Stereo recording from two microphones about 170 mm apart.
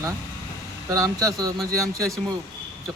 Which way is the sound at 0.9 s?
20° right (ahead or behind).